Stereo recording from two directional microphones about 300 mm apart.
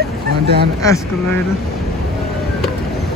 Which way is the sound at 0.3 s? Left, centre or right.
Right.